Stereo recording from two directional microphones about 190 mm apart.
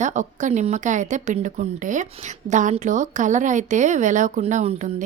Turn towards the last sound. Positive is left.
turn(degrees=-40)  # may be behind; listen again after turning